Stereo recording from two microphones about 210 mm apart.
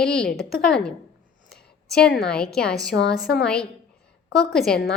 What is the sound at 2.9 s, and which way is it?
Speech, 55° left (ahead or behind).